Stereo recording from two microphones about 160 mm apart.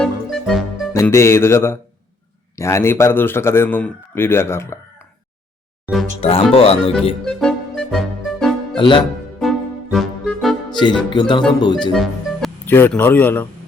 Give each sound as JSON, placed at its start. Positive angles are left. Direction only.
{"t": 0.0, "sound": "music", "side_deg": 0}
{"t": 0.9, "sound": "a man's voice", "side_deg": 15}
{"t": 6.1, "sound": "speech", "side_deg": 35}
{"t": 7.3, "sound": "music", "side_deg": 5}
{"t": 8.8, "sound": "speech", "side_deg": 30}
{"t": 9.4, "sound": "music", "side_deg": 0}
{"t": 10.7, "sound": "speech", "side_deg": 30}
{"t": 11.9, "sound": "speech", "side_deg": 0}
{"t": 12.6, "sound": "a man's voice", "side_deg": 15}